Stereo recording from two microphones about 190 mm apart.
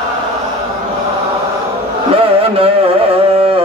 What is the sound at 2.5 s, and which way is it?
Carnatic music, 30° right (ahead or behind).